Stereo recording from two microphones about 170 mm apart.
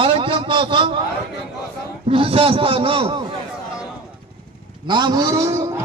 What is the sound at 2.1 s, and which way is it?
A man's voice, 30° right (ahead or behind).